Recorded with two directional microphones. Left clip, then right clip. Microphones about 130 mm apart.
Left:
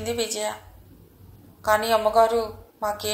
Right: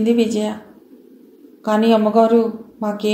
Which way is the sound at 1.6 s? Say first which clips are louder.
Right 4 dB; 35° left (ahead or behind).